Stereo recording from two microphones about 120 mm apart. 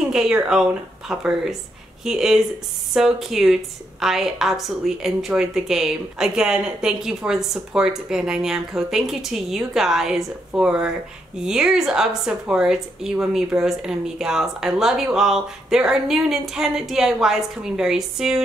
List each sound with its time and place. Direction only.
0.1 s a woman's voice: 5° right (ahead or behind)